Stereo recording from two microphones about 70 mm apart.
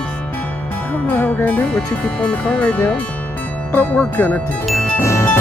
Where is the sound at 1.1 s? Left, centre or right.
Left.